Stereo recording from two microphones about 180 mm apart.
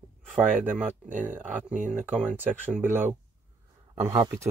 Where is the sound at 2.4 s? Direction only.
10° right (ahead or behind).